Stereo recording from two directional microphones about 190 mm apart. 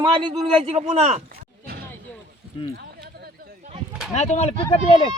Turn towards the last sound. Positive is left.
turn(degrees=25)  # may be behind; listen again after turning